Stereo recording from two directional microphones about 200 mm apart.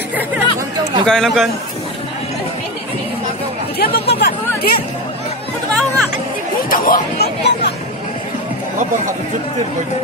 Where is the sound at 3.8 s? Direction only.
55° left (ahead or behind).